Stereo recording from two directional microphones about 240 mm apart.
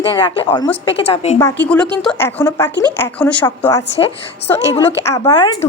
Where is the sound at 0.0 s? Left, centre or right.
Centre.